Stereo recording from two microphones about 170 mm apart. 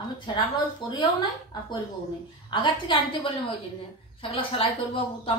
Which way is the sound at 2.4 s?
30° left (ahead or behind).